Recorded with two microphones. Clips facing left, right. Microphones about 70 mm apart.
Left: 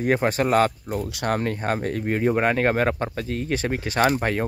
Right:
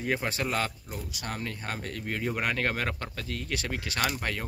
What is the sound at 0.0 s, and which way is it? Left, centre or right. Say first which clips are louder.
Speech: left 9 dB; left.